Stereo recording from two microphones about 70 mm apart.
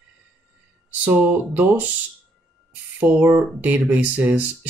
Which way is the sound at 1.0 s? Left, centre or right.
Right.